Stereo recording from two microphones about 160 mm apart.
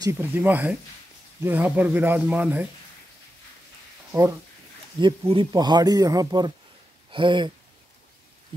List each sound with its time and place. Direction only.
0.0 s speech: 15° right (ahead or behind)
4.1 s speech: 20° right (ahead or behind)
5.0 s speech: 30° right (ahead or behind)